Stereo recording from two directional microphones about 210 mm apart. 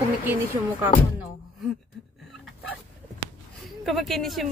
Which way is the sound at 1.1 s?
Centre (ahead or behind).